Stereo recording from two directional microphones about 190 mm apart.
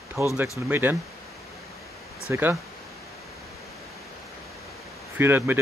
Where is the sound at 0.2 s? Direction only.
15° right (ahead or behind).